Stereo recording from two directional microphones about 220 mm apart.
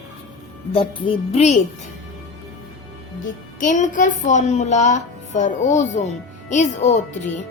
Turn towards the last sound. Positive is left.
turn(degrees=30)  # may be behind; listen again after turning